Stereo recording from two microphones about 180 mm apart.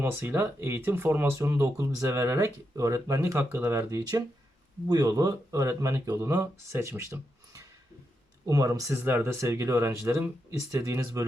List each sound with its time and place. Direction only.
0.0 s speech: 10° right (ahead or behind)